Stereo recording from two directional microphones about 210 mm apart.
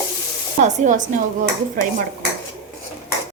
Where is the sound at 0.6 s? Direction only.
35° right (ahead or behind).